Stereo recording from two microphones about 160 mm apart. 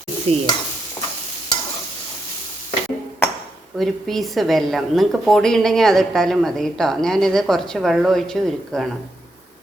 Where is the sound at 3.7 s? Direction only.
Centre (ahead or behind).